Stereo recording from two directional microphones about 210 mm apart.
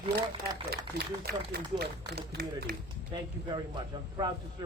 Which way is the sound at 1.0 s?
50° right (ahead or behind).